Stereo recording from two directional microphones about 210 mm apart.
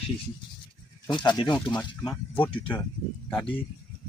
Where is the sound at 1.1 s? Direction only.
20° left (ahead or behind).